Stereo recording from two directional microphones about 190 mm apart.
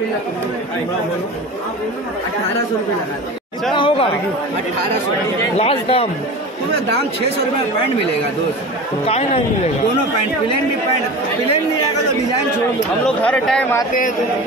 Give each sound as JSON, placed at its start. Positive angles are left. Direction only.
{"t": 3.7, "sound": "speech", "side_deg": 25}
{"t": 5.6, "sound": "speech", "side_deg": 30}
{"t": 9.0, "sound": "speech", "side_deg": 30}
{"t": 13.0, "sound": "speech", "side_deg": 5}